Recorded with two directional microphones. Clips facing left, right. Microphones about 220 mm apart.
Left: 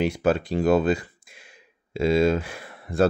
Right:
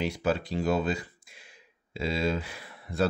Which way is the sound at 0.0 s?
50° left (ahead or behind).